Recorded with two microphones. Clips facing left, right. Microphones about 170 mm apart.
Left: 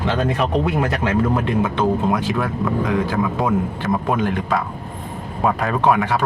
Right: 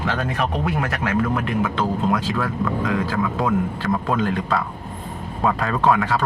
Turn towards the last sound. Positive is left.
turn(degrees=20)  # may be behind; listen again after turning